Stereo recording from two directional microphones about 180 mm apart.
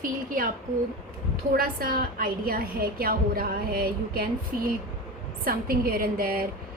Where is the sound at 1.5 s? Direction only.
55° right (ahead or behind).